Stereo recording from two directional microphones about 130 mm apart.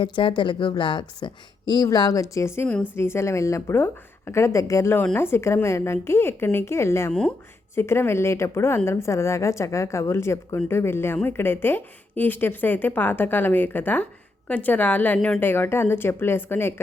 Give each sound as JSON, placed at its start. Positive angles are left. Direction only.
{"t": 0.0, "sound": "a woman's voice", "side_deg": 40}
{"t": 7.1, "sound": "speech", "side_deg": 5}
{"t": 7.8, "sound": "a woman's voice", "side_deg": 20}